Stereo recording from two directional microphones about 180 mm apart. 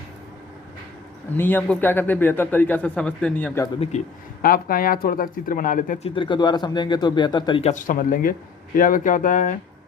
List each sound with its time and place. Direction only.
1.4 s a man's voice: 10° left (ahead or behind)
3.9 s speech: 40° left (ahead or behind)
4.4 s speech: 50° left (ahead or behind)
6.1 s speech: 25° left (ahead or behind)
7.7 s speech: 45° left (ahead or behind)